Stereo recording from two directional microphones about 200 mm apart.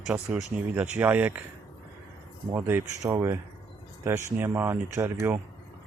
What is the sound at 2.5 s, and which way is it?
Speech, 10° right (ahead or behind).